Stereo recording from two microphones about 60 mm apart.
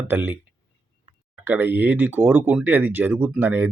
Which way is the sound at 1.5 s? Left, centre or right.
Right.